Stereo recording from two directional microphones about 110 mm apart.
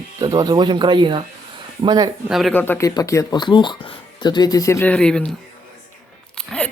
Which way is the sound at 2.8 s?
30° left (ahead or behind).